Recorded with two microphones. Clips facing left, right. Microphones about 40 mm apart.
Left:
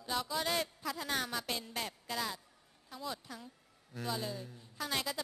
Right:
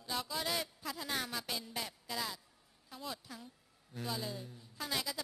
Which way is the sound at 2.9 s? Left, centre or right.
Centre.